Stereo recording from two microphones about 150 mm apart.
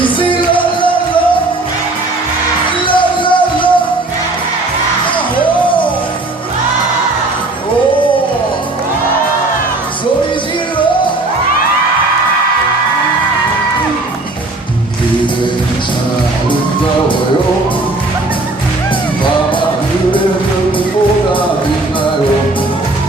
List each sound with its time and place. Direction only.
0.0 s music: 35° left (ahead or behind)
2.8 s music: 35° left (ahead or behind)